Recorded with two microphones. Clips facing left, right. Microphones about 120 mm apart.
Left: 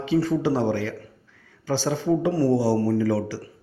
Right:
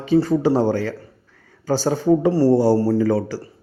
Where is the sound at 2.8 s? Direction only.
30° right (ahead or behind).